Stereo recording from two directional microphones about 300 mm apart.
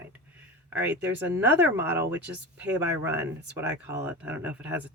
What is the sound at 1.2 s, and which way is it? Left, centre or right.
Speech, centre.